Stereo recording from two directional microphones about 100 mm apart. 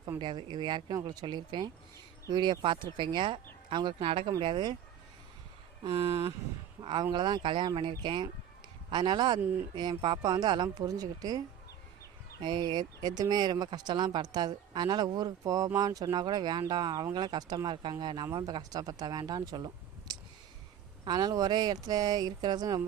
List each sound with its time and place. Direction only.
0.2 s speech: 50° right (ahead or behind)
5.8 s speech: 60° right (ahead or behind)
7.1 s speech: 50° right (ahead or behind)
9.4 s speech: 20° right (ahead or behind)
9.9 s speech: 55° right (ahead or behind); by 22.8 s 40° right (ahead or behind)